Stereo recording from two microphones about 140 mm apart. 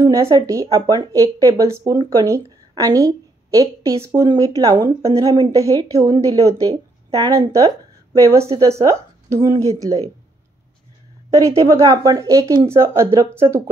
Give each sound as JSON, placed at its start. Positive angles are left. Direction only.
{"t": 0.0, "sound": "a woman's voice", "side_deg": -20}
{"t": 5.9, "sound": "a woman's voice", "side_deg": -45}
{"t": 6.2, "sound": "speech", "side_deg": -25}
{"t": 11.3, "sound": "speech", "side_deg": -20}